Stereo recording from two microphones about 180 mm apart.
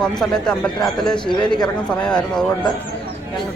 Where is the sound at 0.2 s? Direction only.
5° left (ahead or behind).